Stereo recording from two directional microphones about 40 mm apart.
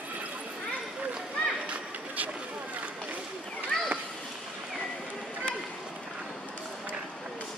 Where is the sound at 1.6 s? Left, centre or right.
Right.